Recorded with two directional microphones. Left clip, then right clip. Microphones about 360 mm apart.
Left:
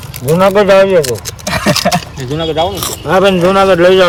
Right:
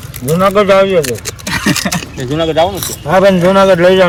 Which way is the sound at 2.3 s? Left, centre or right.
Right.